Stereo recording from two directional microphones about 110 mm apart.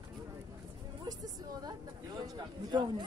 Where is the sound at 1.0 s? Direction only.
35° right (ahead or behind).